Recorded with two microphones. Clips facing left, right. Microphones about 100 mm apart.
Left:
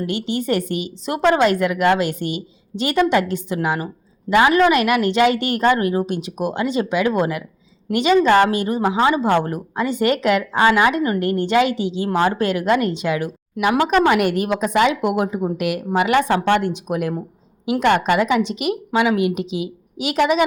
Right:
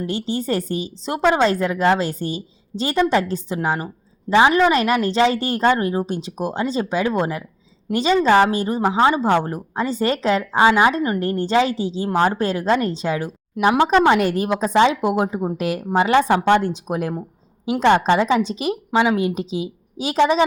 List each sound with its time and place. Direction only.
0.0 s a woman's voice: 30° right (ahead or behind)
9.2 s speech: 5° right (ahead or behind)
9.7 s a woman's voice: 35° right (ahead or behind)
16.3 s speech: 15° right (ahead or behind)
16.6 s a woman's voice: 30° right (ahead or behind)